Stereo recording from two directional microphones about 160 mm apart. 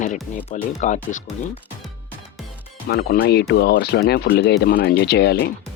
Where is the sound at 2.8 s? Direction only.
80° left.